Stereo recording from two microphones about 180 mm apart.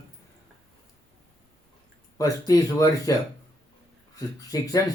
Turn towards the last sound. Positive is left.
turn(degrees=20)  # may be behind; listen again after turning